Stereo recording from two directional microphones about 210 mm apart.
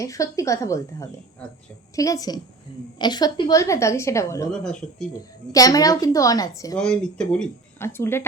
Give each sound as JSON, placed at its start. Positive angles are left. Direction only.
{"t": 0.0, "sound": "a woman's voice", "side_deg": 15}
{"t": 4.6, "sound": "speech", "side_deg": 5}
{"t": 5.5, "sound": "a woman's voice", "side_deg": 15}
{"t": 6.7, "sound": "speech", "side_deg": 5}